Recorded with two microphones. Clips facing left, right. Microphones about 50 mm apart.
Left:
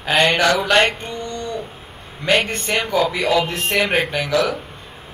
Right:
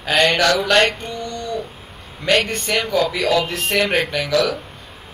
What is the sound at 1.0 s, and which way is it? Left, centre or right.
Speech, left.